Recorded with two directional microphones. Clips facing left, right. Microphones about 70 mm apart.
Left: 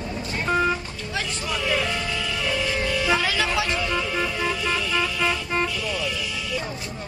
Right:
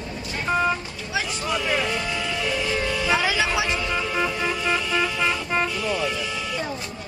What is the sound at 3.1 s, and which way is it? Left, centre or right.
Vehicle, centre.